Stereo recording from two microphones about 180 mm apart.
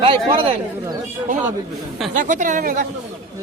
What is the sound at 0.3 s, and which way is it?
Speech, 30° right (ahead or behind).